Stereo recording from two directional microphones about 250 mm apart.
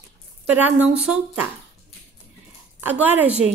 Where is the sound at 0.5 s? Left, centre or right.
Centre.